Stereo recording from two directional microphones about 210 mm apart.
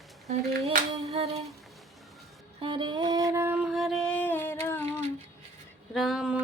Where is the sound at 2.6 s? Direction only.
20° right (ahead or behind); by 4.8 s 10° left (ahead or behind).